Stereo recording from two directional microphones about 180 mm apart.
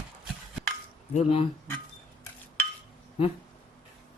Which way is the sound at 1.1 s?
35° left (ahead or behind).